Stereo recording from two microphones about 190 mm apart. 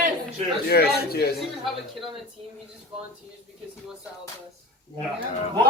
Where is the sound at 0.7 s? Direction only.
55° left (ahead or behind).